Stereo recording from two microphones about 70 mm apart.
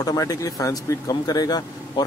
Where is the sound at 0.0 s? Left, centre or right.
Left.